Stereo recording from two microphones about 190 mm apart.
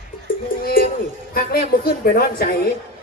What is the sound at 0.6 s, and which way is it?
Speech, 50° left (ahead or behind).